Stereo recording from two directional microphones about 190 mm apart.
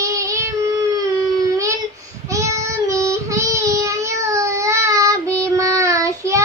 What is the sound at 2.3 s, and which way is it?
Child singing, 15° right (ahead or behind).